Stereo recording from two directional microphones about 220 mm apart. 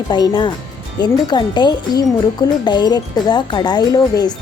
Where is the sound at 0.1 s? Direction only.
20° left (ahead or behind).